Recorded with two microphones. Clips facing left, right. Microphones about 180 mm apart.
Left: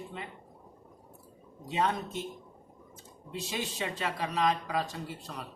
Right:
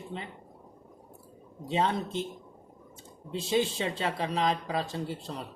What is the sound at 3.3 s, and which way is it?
Speech, 30° right (ahead or behind).